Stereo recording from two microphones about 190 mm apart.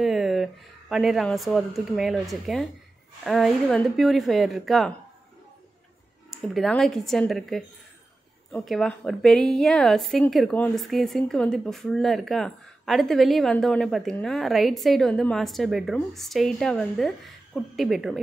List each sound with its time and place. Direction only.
0.0 s a woman's voice: centre (ahead or behind)
6.3 s a woman's voice: centre (ahead or behind)